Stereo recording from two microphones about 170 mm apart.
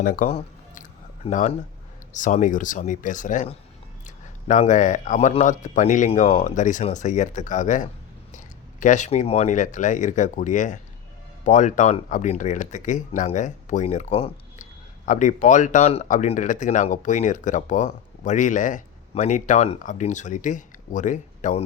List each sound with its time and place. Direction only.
0.0 s speech: 55° left (ahead or behind)
0.3 s a sound: 50° left (ahead or behind)
1.2 s speech: 45° left (ahead or behind)